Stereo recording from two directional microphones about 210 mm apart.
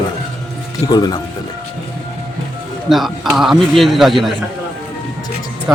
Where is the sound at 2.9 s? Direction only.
Centre (ahead or behind).